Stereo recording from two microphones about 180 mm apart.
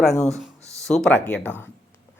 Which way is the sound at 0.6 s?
15° right (ahead or behind).